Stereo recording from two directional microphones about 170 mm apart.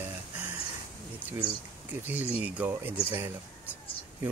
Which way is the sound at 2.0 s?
10° right (ahead or behind).